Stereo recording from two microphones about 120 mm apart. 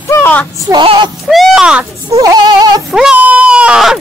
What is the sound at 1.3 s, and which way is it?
Speech, centre (ahead or behind).